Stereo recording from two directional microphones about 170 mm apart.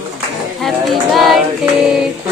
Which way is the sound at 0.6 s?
Centre (ahead or behind).